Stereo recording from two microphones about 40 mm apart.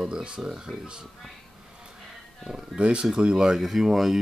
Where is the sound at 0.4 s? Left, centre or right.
Centre.